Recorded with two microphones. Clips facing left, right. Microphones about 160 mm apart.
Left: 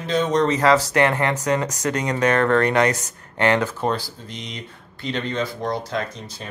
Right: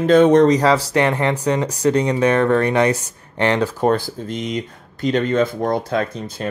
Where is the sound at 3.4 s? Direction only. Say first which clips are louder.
Right 1 dB; 35° right (ahead or behind).